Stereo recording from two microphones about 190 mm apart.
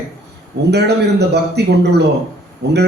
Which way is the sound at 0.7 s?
60° right (ahead or behind).